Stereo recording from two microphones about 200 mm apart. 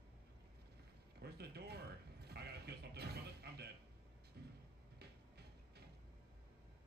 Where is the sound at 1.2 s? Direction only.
55° right (ahead or behind).